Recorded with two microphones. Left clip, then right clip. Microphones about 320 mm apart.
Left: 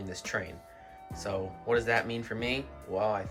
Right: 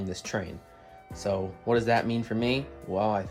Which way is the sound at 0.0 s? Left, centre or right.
Centre.